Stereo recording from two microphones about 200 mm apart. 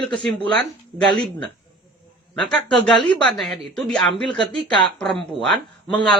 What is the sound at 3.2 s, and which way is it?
Speech, centre (ahead or behind).